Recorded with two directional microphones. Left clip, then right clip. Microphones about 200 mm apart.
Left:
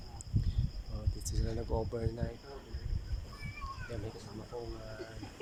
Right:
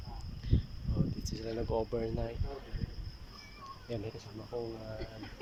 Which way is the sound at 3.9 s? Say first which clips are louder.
Right 9 dB; 10° right (ahead or behind).